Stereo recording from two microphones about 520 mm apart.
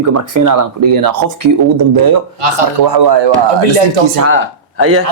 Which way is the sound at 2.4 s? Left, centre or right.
Right.